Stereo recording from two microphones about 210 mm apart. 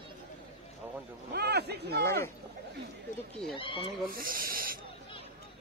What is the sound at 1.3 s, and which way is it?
Speech, 50° right (ahead or behind).